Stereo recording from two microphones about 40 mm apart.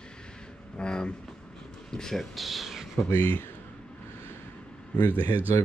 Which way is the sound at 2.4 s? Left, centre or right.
Centre.